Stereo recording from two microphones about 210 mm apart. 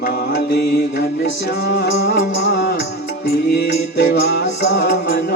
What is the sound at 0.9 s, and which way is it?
Music, 60° left (ahead or behind).